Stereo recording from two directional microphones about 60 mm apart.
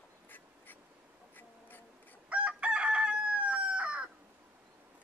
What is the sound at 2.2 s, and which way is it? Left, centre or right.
Chicken, centre.